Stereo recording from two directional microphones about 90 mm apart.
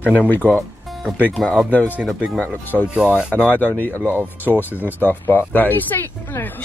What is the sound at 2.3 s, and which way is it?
Speech, 25° right (ahead or behind).